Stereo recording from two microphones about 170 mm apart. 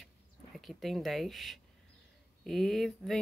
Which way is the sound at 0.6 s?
Centre (ahead or behind).